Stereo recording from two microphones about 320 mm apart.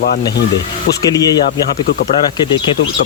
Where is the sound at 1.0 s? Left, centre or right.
Centre.